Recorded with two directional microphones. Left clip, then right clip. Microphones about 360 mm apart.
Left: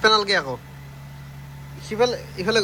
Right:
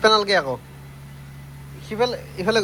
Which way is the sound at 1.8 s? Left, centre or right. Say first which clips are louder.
Left 1 dB; centre.